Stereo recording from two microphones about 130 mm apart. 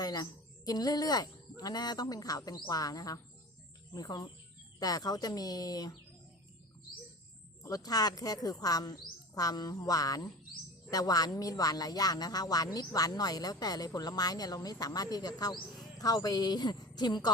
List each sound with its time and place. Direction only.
0.0 s speech: 30° left (ahead or behind)
7.6 s speech: 30° left (ahead or behind)